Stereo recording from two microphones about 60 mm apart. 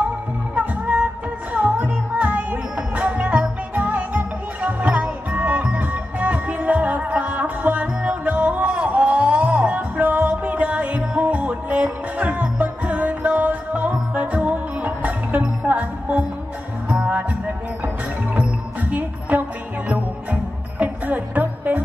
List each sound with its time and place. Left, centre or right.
0.6 s music: right
18.3 s music: right
20.8 s music: right